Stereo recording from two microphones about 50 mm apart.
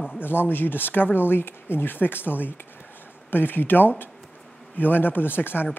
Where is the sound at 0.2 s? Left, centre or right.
Left.